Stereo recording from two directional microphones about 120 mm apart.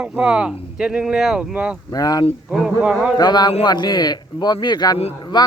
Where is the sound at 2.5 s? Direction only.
5° right (ahead or behind).